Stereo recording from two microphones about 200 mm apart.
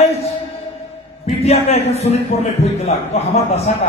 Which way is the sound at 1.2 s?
30° left (ahead or behind).